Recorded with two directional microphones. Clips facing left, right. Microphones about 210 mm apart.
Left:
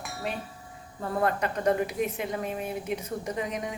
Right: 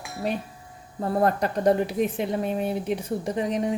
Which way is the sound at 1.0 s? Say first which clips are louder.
Right 5 dB; 40° right (ahead or behind).